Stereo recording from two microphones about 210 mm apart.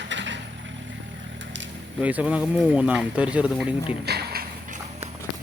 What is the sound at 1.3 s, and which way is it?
Vehicle, 60° right (ahead or behind).